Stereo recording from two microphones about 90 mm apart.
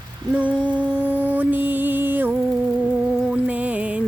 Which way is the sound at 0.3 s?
15° right (ahead or behind).